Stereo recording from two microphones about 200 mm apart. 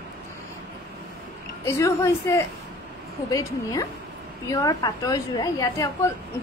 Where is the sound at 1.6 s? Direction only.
15° left (ahead or behind).